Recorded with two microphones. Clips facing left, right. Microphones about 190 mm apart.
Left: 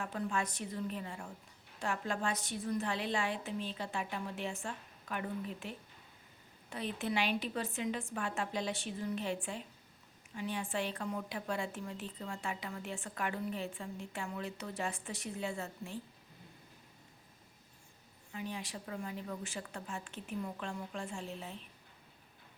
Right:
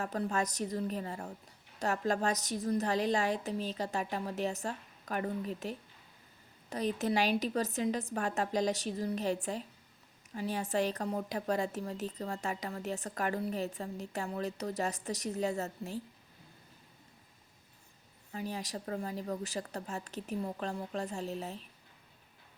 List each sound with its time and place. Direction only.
0.0 s a woman's voice: 40° right (ahead or behind)
18.3 s a woman's voice: 40° right (ahead or behind)